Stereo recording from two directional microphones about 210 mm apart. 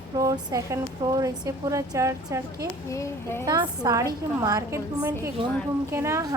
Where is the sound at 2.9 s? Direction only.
15° left (ahead or behind).